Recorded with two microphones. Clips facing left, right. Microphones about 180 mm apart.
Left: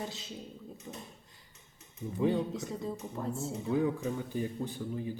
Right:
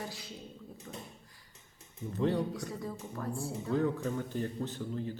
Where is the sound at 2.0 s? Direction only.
10° left (ahead or behind).